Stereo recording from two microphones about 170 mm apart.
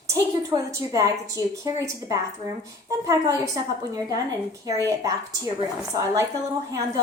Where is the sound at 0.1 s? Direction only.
20° right (ahead or behind).